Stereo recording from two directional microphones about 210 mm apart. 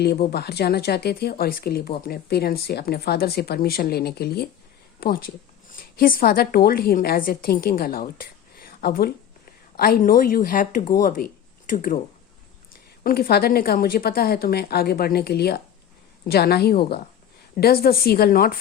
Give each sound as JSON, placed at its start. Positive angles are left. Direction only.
{"t": 0.0, "sound": "a woman's voice", "side_deg": 50}
{"t": 13.0, "sound": "speech", "side_deg": 45}